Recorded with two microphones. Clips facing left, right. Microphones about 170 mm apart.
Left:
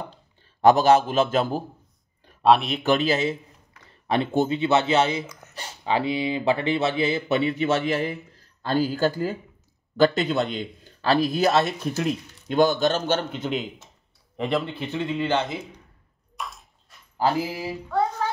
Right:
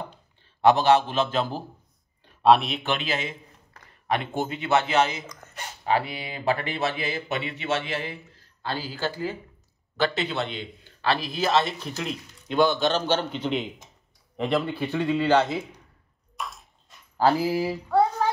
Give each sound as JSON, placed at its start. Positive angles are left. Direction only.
{"t": 0.6, "sound": "speech", "side_deg": 40}
{"t": 2.4, "sound": "speech", "side_deg": 0}
{"t": 2.8, "sound": "speech", "side_deg": 40}
{"t": 5.2, "sound": "speech", "side_deg": 5}
{"t": 5.5, "sound": "speech", "side_deg": 25}
{"t": 14.3, "sound": "speech", "side_deg": 0}
{"t": 14.7, "sound": "speech", "side_deg": 20}
{"t": 16.3, "sound": "bathtub", "side_deg": 0}